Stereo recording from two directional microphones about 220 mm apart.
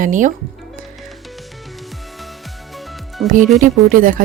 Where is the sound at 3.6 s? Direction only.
40° right (ahead or behind).